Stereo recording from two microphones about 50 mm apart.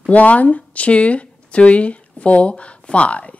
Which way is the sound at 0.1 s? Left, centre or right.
Left.